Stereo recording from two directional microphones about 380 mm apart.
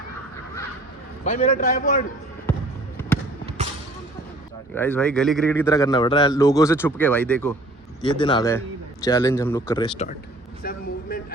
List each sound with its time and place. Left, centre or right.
1.2 s a man's voice: centre
4.7 s a man's voice: centre
10.6 s a sound: left